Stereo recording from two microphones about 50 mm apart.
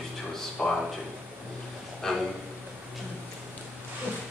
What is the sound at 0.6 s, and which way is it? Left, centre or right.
Speech, centre.